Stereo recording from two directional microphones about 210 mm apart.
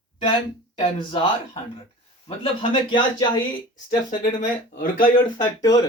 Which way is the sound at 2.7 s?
20° left (ahead or behind).